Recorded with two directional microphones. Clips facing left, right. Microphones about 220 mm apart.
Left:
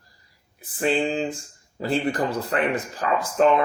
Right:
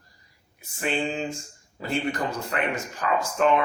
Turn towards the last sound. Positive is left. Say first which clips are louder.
# left 3 dB
turn(degrees=35)  # may be behind; listen again after turning